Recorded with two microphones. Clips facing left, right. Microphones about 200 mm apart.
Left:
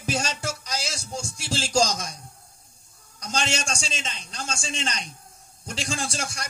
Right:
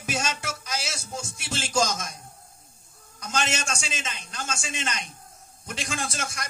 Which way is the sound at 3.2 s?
35° left (ahead or behind).